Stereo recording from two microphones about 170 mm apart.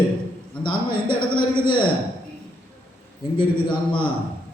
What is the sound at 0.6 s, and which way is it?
A man's voice, 30° left (ahead or behind).